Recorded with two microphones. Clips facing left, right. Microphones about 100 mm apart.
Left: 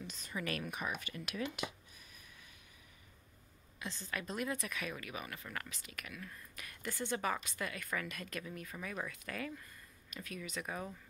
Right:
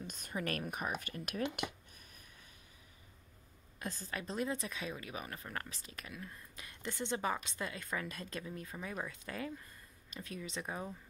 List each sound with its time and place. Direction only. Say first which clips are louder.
0.0 s speech: right 2 dB; 50° right (ahead or behind)
1.6 s a sound: right 1 dB; 55° right (ahead or behind)
3.8 s speech: right 1 dB; 40° right (ahead or behind); by 10.9 s 25° right (ahead or behind)